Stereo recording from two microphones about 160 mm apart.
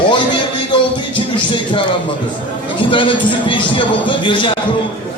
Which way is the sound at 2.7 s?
30° left (ahead or behind).